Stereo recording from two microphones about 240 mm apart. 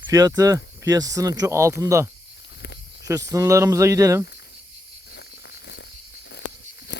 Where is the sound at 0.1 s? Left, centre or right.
Centre.